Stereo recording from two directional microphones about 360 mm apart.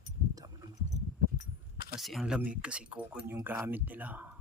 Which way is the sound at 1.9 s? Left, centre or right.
Centre.